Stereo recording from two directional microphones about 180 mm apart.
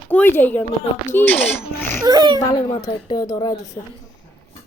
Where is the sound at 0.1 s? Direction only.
10° left (ahead or behind).